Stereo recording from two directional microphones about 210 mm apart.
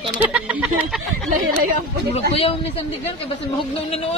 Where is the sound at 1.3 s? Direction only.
40° right (ahead or behind).